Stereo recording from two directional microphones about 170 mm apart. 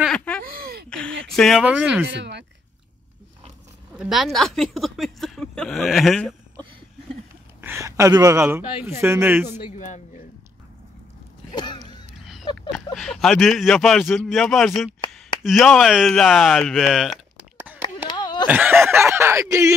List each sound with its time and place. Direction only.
0.0 s a sound: 5° left (ahead or behind)
1.2 s speech: 5° left (ahead or behind)
1.6 s speech: 5° right (ahead or behind)
2.0 s speech: 90° right
3.9 s speech: 5° right (ahead or behind)
7.6 s speech: 15° right (ahead or behind)
9.7 s a man's voice: 45° left (ahead or behind)
11.5 s a sound: 25° left (ahead or behind)
12.3 s a sound: centre (ahead or behind)
12.7 s speech: centre (ahead or behind)
17.8 s a sound: 25° left (ahead or behind)
18.5 s speech: 10° right (ahead or behind)